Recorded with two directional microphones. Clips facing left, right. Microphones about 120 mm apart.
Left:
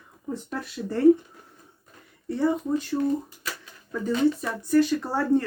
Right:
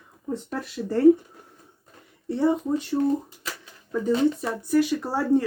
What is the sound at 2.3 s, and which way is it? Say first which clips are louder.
Speech: right 2 dB; 20° right (ahead or behind).